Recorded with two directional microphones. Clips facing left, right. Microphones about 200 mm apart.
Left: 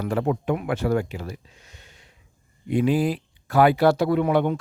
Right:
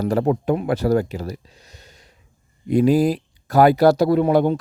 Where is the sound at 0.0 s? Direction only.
40° right (ahead or behind).